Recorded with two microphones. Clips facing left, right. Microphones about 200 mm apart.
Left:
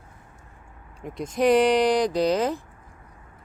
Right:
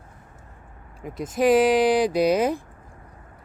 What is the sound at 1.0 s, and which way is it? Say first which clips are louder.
Speech: right 1 dB; 5° right (ahead or behind).